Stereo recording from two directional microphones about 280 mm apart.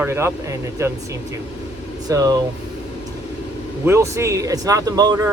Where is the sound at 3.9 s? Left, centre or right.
Centre.